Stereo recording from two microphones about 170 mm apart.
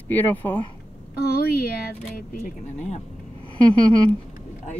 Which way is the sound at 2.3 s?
40° left (ahead or behind).